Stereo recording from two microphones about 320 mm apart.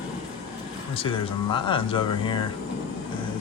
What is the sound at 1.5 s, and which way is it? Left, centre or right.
Speech, centre.